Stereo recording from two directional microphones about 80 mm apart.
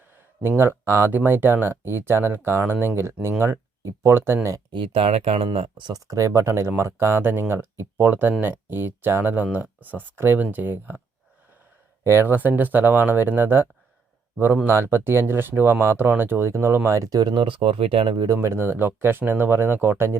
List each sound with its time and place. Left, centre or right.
0.4 s speech: right
4.7 s speech: right
6.1 s speech: right
12.0 s speech: right
18.3 s speech: right